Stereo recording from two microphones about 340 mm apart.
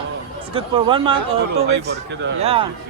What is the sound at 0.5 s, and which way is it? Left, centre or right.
Speech, centre.